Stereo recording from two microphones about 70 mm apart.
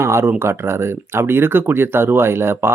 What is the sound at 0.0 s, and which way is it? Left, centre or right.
Speech, right.